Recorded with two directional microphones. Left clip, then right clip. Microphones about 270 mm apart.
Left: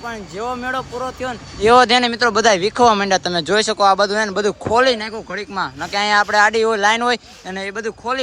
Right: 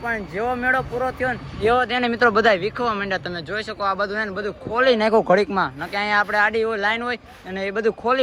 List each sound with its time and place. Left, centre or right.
0.1 s speech: centre
1.6 s speech: left
1.9 s speech: centre
4.9 s speech: centre